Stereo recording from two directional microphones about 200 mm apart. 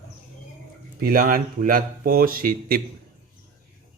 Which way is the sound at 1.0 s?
45° right (ahead or behind).